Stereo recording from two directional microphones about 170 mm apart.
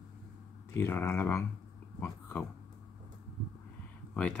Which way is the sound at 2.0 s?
10° left (ahead or behind).